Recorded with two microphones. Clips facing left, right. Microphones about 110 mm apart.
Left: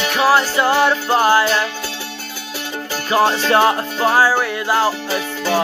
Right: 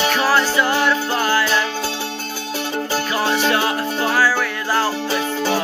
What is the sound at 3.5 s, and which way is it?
Music, 30° left (ahead or behind).